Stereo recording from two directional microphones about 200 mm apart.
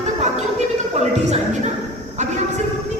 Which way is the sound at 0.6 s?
35° right (ahead or behind).